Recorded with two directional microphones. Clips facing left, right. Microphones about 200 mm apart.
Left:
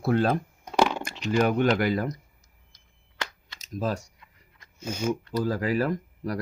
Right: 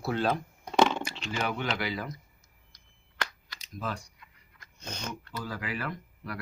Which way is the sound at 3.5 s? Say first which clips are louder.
Left 7 dB; 45° left (ahead or behind).